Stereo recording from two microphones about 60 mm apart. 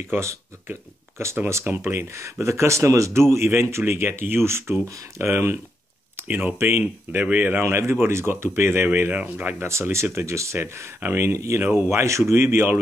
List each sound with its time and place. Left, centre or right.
0.7 s speech: right
6.2 s speech: right
7.6 s speech: right
9.1 s speech: right
9.6 s speech: right
10.6 s speech: right
11.2 s speech: right